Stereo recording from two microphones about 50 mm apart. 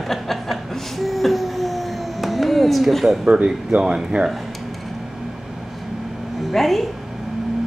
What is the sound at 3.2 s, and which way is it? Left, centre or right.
Speech, right.